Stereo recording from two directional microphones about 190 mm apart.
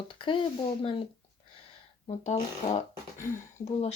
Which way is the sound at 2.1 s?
35° left (ahead or behind).